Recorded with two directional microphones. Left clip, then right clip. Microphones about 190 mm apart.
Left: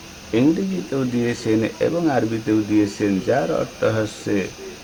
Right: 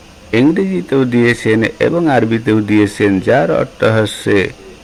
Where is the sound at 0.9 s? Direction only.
35° right (ahead or behind).